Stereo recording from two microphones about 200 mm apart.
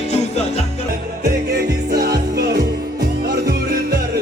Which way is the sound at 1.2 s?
55° right (ahead or behind).